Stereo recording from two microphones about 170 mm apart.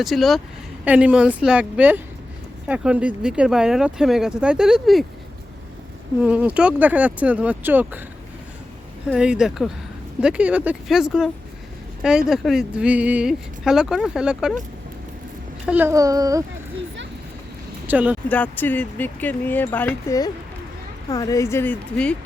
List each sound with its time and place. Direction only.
0.0 s speech: centre (ahead or behind)
6.2 s speech: 5° right (ahead or behind)
9.0 s speech: 5° right (ahead or behind)
15.6 s a child's voice: 10° right (ahead or behind)
17.8 s speech: 10° right (ahead or behind)
18.3 s speech: 10° left (ahead or behind)